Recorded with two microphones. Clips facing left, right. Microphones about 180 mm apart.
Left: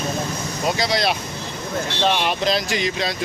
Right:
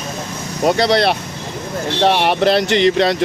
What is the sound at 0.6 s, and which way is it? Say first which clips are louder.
Speech: right 7 dB; 60° right (ahead or behind).